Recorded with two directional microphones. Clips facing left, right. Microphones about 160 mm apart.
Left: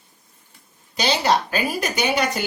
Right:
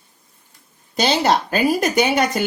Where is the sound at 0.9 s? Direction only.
50° right (ahead or behind).